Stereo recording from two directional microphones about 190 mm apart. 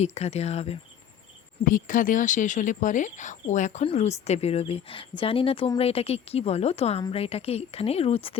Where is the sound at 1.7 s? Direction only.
45° left (ahead or behind).